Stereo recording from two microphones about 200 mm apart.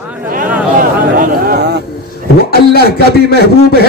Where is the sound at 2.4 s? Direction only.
50° left (ahead or behind).